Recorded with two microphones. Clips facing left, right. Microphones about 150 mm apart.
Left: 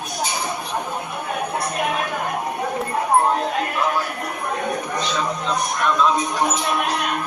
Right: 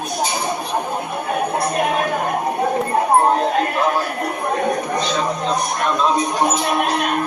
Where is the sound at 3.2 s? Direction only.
35° right (ahead or behind).